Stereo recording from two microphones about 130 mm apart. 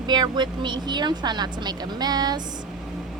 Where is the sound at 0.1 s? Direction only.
35° right (ahead or behind).